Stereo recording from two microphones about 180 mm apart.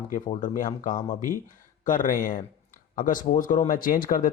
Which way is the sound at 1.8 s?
45° left (ahead or behind).